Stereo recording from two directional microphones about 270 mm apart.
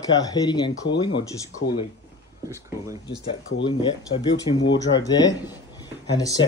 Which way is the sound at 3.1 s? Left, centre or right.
Left.